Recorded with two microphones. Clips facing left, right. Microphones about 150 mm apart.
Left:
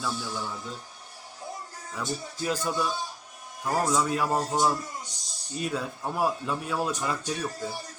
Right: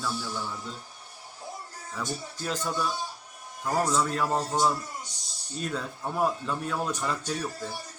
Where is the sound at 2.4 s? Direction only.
10° left (ahead or behind).